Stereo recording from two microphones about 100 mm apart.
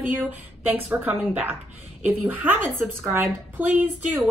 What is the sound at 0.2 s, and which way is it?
A woman's voice, 20° right (ahead or behind).